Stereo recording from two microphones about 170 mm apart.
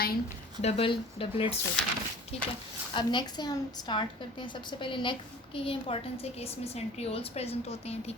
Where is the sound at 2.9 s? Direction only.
25° left (ahead or behind).